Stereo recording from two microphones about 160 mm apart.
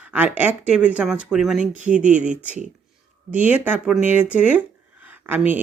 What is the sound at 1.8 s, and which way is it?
Speech, 50° right (ahead or behind).